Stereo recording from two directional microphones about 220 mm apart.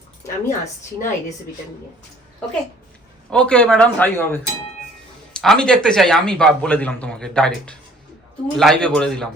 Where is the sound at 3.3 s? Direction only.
5° left (ahead or behind).